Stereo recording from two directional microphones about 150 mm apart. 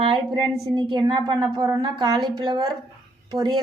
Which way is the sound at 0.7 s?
30° right (ahead or behind).